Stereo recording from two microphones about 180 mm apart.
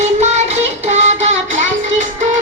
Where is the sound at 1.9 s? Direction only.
45° right (ahead or behind).